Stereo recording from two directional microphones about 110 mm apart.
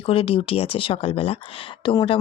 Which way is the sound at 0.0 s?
60° left (ahead or behind).